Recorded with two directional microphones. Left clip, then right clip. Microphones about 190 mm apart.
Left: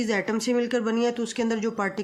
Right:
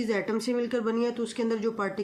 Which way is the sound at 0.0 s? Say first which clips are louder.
Left 3 dB; 50° left (ahead or behind).